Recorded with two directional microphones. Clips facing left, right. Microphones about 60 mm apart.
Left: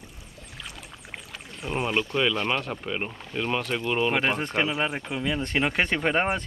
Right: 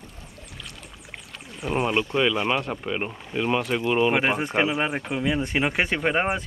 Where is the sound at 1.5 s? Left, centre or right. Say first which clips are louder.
Right 3 dB; centre.